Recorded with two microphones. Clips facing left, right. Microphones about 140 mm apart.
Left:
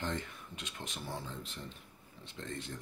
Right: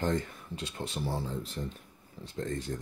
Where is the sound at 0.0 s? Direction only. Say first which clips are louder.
Right 8 dB; 40° right (ahead or behind).